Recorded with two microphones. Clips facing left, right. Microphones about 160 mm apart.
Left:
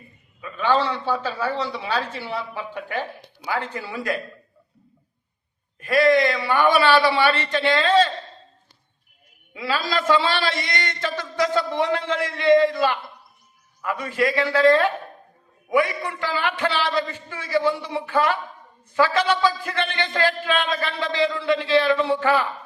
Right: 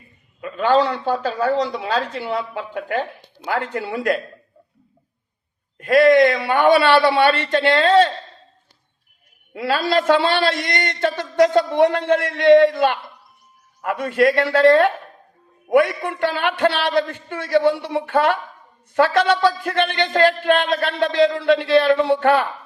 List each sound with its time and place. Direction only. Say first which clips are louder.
0.4 s a man's voice: right 4 dB; 50° right (ahead or behind)
3.5 s a man's voice: right 4 dB; 60° right (ahead or behind)
5.7 s a man's voice: right 5 dB; 60° right (ahead or behind)
9.5 s a man's voice: right 5 dB; 60° right (ahead or behind)